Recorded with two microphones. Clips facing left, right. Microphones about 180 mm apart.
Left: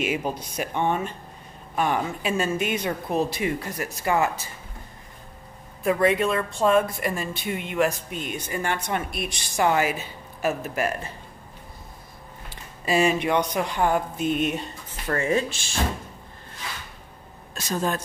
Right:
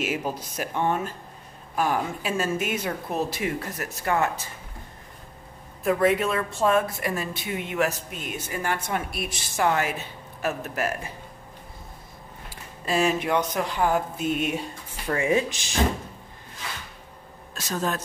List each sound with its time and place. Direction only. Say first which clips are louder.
0.0 s speech: left 2 dB; 5° right (ahead or behind)
5.9 s speech: left 1 dB; centre (ahead or behind)
12.8 s speech: left 2 dB; centre (ahead or behind); by 15.8 s 15° right (ahead or behind)
17.6 s speech: left 2 dB; centre (ahead or behind)